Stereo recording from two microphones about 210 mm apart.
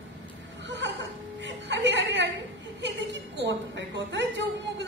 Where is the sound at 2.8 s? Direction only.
60° right (ahead or behind).